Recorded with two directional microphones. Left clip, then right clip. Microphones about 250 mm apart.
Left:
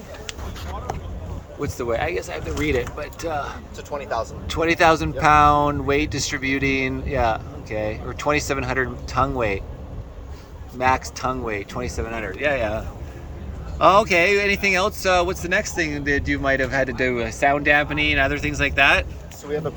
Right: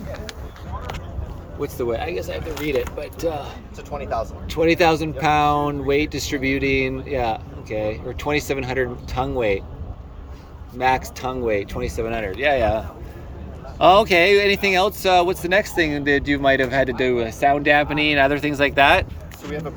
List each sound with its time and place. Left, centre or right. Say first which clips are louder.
1.6 s speech: even; centre
3.9 s speech: even; left
4.4 s speech: even; centre
10.8 s speech: even; centre